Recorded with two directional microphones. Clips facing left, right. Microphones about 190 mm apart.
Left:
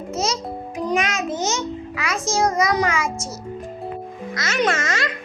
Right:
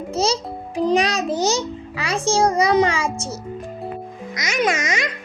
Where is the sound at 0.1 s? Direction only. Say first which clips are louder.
Right 3 dB; 30° right (ahead or behind).